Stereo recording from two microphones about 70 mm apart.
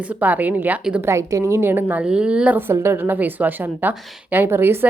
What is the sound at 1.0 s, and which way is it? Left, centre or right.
Speech, right.